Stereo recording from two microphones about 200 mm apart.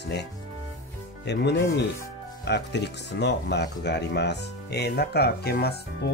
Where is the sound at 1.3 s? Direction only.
55° left (ahead or behind).